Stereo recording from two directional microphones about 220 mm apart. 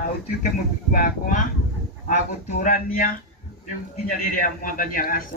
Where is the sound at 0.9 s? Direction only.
35° left (ahead or behind).